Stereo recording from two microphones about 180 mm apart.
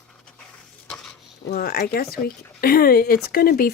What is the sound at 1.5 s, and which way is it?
Speech, 60° left (ahead or behind).